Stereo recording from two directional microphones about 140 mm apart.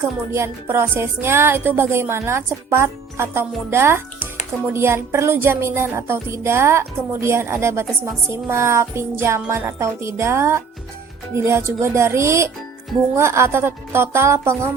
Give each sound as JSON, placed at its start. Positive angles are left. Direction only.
{"t": 0.3, "sound": "music", "side_deg": -20}